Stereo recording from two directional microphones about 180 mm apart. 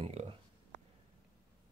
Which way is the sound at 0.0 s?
35° right (ahead or behind).